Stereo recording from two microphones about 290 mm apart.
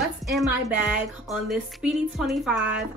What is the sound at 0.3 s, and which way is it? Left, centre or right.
A woman's voice, centre.